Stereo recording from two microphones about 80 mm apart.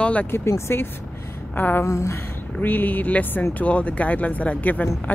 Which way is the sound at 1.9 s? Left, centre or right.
Left.